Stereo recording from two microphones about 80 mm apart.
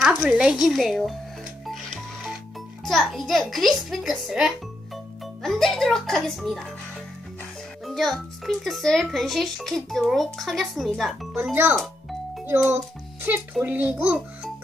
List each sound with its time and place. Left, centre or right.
0.3 s speech: centre
1.7 s music: centre
2.8 s speech: centre
7.8 s a child's voice: centre
11.5 s a child's voice: right